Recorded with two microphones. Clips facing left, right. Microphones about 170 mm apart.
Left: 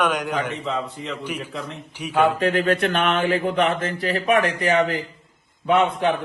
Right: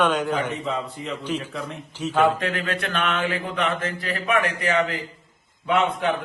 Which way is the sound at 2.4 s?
35° left (ahead or behind).